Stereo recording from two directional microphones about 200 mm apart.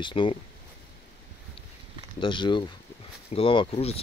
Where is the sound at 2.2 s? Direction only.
25° left (ahead or behind).